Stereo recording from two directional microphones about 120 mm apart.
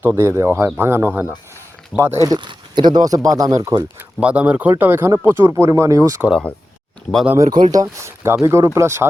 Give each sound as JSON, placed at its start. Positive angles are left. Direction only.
{"t": 0.0, "sound": "speech", "side_deg": -20}
{"t": 4.2, "sound": "speech", "side_deg": -10}
{"t": 7.5, "sound": "speech", "side_deg": -35}